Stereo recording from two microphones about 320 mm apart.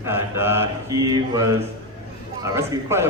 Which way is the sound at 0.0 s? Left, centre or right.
Centre.